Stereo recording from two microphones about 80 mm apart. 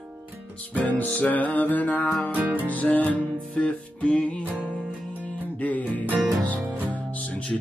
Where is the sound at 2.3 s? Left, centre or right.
Right.